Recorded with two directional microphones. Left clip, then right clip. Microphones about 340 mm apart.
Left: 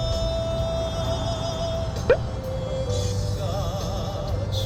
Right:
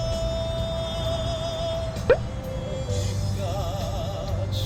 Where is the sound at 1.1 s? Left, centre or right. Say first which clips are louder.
Even; left.